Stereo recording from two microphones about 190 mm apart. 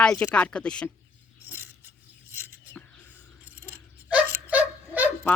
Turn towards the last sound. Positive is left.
turn(degrees=-10)  # may be behind; listen again after turning